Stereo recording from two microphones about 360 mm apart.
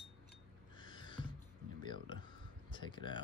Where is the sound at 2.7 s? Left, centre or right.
Centre.